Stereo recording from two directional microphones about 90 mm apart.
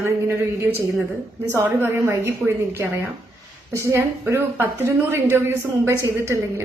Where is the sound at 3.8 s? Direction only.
30° right (ahead or behind).